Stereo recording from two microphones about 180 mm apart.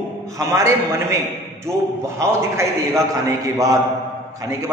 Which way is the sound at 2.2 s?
15° right (ahead or behind).